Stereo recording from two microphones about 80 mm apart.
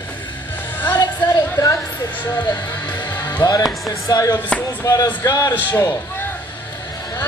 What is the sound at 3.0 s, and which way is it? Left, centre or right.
Music, left.